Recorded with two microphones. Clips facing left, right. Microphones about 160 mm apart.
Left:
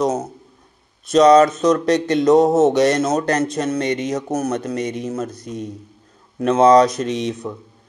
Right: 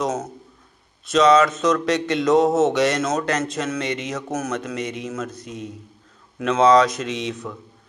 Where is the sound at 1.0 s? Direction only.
35° left (ahead or behind).